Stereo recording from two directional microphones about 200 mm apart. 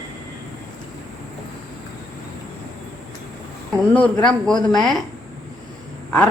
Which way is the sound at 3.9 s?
5° left (ahead or behind).